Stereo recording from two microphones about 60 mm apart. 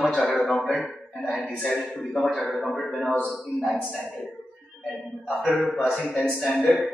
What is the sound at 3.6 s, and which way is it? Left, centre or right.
Speech, centre.